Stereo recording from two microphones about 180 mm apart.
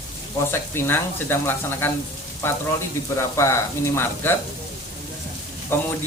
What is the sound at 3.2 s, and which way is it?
Speech, 15° left (ahead or behind).